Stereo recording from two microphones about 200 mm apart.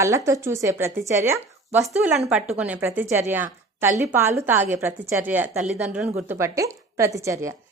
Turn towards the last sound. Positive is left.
turn(degrees=-15)  # may be behind; listen again after turning